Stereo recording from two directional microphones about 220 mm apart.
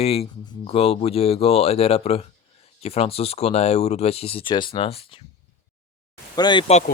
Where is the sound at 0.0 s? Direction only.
30° left (ahead or behind).